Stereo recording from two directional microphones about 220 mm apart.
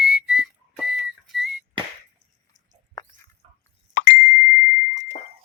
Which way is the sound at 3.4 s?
25° right (ahead or behind).